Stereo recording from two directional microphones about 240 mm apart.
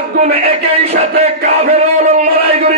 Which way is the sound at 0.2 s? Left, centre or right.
Right.